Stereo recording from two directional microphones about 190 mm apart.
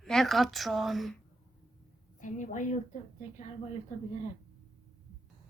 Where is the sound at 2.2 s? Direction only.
40° left (ahead or behind).